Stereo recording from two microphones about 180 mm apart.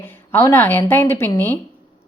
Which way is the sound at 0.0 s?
10° left (ahead or behind).